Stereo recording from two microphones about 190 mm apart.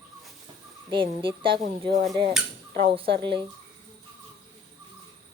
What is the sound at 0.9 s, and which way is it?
Speech, 25° right (ahead or behind).